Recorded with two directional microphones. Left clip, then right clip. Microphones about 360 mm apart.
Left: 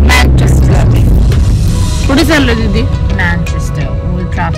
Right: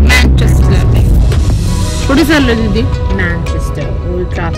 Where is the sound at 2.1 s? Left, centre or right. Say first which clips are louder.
Even; left.